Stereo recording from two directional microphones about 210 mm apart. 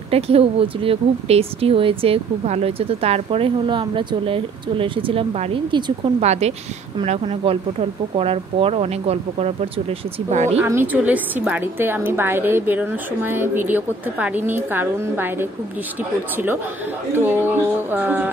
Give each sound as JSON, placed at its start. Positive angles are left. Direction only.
{"t": 0.1, "sound": "speech", "side_deg": -25}
{"t": 10.6, "sound": "a woman's voice", "side_deg": -10}
{"t": 17.1, "sound": "a woman's voice", "side_deg": -10}